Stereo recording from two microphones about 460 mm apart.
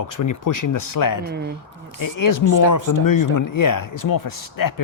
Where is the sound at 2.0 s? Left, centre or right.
Left.